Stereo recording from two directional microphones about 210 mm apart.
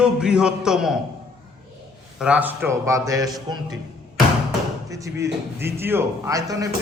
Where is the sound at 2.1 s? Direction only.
5° right (ahead or behind).